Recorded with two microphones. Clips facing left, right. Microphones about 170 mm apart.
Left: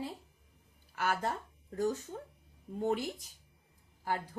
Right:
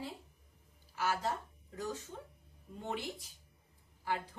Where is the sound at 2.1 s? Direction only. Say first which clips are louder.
Left 4 dB; 45° left (ahead or behind).